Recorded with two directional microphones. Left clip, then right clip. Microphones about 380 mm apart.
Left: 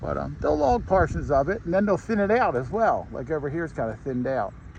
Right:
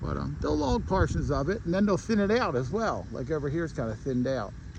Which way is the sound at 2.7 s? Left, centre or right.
Left.